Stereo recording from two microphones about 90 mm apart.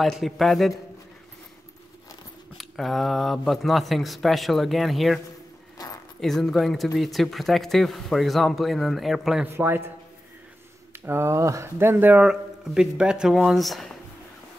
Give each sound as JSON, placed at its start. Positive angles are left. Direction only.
{"t": 0.0, "sound": "speech", "side_deg": 0}
{"t": 2.5, "sound": "speech", "side_deg": 0}
{"t": 6.2, "sound": "speech", "side_deg": 5}
{"t": 9.5, "sound": "speech", "side_deg": -25}
{"t": 11.1, "sound": "speech", "side_deg": -30}